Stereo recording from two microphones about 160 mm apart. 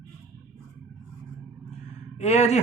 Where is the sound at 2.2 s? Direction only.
45° left (ahead or behind).